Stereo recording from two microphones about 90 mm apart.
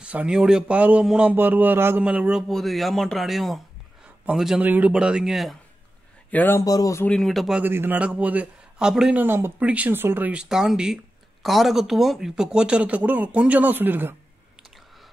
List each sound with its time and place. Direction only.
0.0 s speech: 15° right (ahead or behind)
1.3 s speech: 20° right (ahead or behind)
2.0 s speech: 10° right (ahead or behind)
2.4 s speech: centre (ahead or behind)
4.6 s speech: 15° right (ahead or behind); by 5.6 s centre (ahead or behind)
6.3 s speech: 25° left (ahead or behind)
6.6 s speech: 45° left (ahead or behind)
7.1 s speech: centre (ahead or behind)
7.6 s speech: 25° right (ahead or behind); by 9.1 s 5° right (ahead or behind)
9.1 s speech: 25° right (ahead or behind)